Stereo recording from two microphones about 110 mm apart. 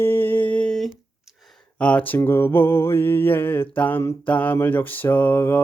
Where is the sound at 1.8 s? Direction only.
15° left (ahead or behind).